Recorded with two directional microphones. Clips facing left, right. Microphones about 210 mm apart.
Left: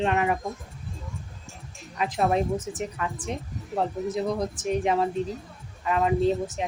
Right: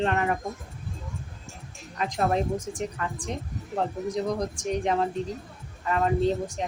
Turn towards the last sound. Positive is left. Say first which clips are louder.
# left 1 dB
turn(degrees=5)  # may be behind; listen again after turning